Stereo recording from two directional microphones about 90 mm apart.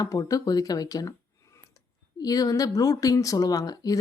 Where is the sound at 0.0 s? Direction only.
40° left (ahead or behind).